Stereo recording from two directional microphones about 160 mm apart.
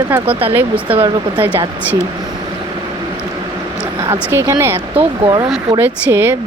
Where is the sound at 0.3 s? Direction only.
35° right (ahead or behind).